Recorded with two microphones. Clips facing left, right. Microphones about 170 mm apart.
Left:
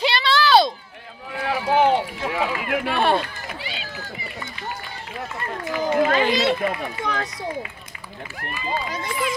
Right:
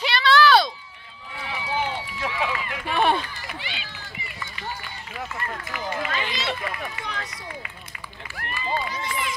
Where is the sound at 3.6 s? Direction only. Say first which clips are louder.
Left 4 dB; 35° left (ahead or behind).